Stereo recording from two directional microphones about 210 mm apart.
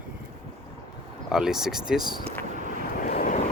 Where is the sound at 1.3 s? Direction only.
Centre (ahead or behind).